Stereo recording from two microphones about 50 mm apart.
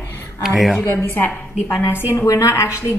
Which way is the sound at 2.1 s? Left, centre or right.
Left.